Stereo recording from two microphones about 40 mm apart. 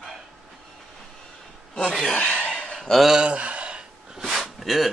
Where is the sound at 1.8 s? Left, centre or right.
Left.